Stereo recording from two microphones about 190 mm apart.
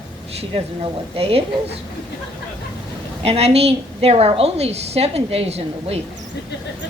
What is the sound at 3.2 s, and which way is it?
A woman's voice, 30° right (ahead or behind).